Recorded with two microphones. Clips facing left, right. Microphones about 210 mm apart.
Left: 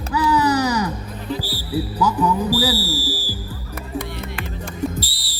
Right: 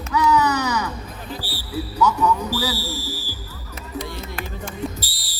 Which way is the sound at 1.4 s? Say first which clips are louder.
Left 5 dB; 35° left (ahead or behind).